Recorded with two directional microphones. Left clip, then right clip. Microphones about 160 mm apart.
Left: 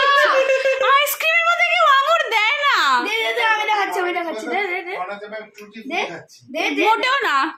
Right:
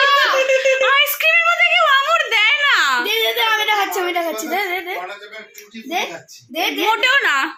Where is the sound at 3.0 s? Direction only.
60° right (ahead or behind).